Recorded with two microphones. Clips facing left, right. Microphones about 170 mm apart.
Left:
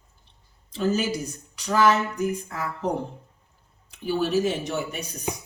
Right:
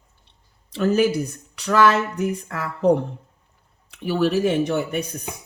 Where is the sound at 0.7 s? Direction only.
60° right (ahead or behind).